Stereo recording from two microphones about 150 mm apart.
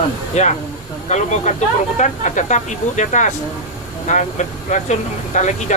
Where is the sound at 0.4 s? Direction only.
50° left (ahead or behind).